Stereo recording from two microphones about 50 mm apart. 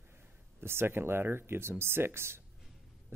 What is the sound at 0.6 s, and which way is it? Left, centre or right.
Speech, right.